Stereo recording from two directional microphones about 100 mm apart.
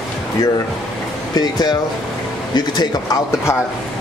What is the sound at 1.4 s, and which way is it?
Speech, 45° left (ahead or behind).